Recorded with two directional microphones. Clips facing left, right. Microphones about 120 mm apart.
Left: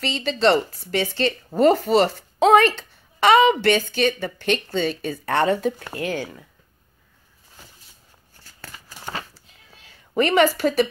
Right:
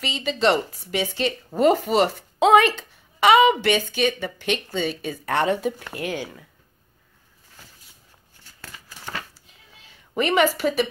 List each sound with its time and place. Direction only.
0.0 s a woman's voice: 5° right (ahead or behind)
8.4 s scissors: 35° left (ahead or behind)
10.1 s a woman's voice: 5° right (ahead or behind)